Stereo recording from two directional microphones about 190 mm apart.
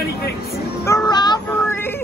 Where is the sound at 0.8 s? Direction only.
20° left (ahead or behind).